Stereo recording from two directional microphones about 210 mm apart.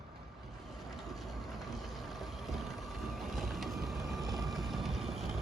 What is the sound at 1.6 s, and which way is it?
Vehicle, centre (ahead or behind).